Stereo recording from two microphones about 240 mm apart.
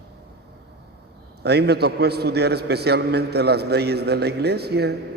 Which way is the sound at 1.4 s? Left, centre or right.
Right.